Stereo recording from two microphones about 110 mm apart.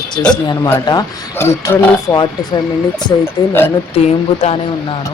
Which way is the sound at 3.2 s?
20° left (ahead or behind).